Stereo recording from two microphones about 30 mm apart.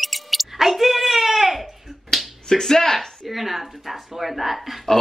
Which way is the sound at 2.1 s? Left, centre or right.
Centre.